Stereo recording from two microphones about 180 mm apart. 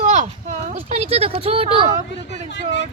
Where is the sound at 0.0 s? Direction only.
40° right (ahead or behind).